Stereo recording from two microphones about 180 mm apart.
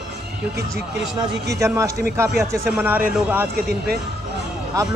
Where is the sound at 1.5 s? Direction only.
15° right (ahead or behind).